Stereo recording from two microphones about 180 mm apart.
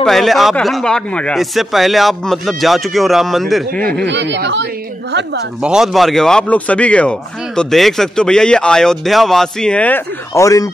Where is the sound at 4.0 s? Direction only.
80° right.